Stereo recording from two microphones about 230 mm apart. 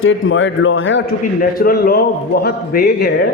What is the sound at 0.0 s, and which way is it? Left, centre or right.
A man's voice, left.